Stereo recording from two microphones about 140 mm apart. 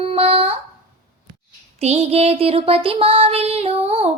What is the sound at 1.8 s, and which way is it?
Child singing, 50° right (ahead or behind).